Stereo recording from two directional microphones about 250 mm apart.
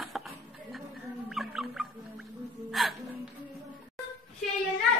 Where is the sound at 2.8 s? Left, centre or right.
Centre.